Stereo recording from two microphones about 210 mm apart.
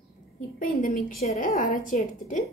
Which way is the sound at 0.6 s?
40° left (ahead or behind).